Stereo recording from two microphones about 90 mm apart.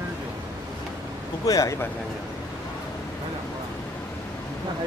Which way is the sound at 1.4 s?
40° left (ahead or behind).